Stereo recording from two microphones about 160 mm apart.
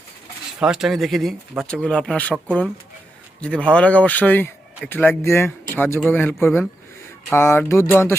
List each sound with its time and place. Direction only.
0.6 s speech: 5° right (ahead or behind)
3.4 s speech: 5° left (ahead or behind)